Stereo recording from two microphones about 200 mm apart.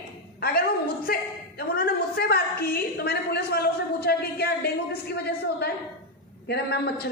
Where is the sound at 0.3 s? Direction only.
50° left (ahead or behind).